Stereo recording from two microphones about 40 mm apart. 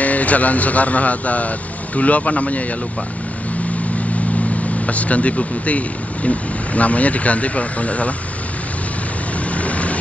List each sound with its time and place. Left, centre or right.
0.0 s speech: left
4.8 s speech: left
9.5 s vehicle: left